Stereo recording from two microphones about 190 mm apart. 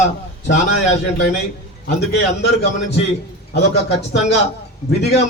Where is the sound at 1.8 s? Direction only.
60° left (ahead or behind).